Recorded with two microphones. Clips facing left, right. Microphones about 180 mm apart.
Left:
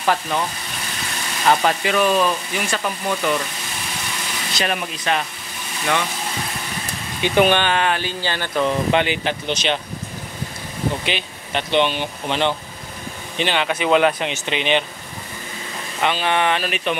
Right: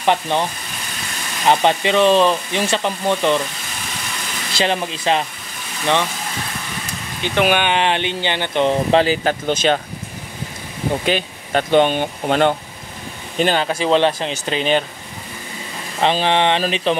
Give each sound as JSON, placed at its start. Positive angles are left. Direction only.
{"t": 0.0, "sound": "speech", "side_deg": -25}
{"t": 4.6, "sound": "speech", "side_deg": -30}
{"t": 7.4, "sound": "speech", "side_deg": -10}
{"t": 7.7, "sound": "speech", "side_deg": -25}
{"t": 11.1, "sound": "speech", "side_deg": -45}
{"t": 16.0, "sound": "speech", "side_deg": -30}